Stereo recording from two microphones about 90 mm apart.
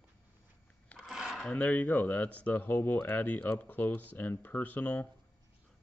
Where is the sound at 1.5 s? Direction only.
15° left (ahead or behind).